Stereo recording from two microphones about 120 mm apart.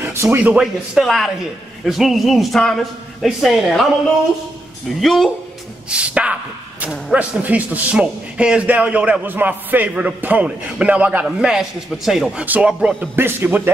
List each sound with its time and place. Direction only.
0.0 s a sound: 20° right (ahead or behind)
0.4 s a man's voice: 5° right (ahead or behind)
4.8 s a man's voice: centre (ahead or behind)
5.9 s speech: 10° right (ahead or behind)